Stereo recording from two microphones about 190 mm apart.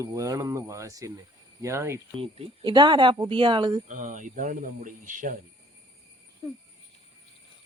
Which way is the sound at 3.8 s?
40° right (ahead or behind).